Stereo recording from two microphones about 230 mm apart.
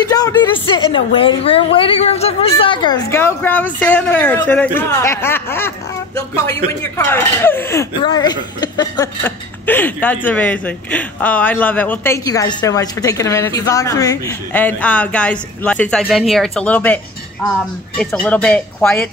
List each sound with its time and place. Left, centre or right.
0.0 s speech: centre